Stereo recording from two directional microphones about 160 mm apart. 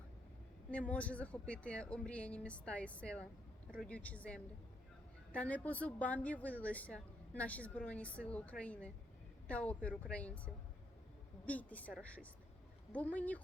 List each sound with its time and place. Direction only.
0.7 s a woman's voice: 10° left (ahead or behind)